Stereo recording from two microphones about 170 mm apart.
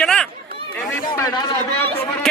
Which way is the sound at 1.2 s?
20° left (ahead or behind).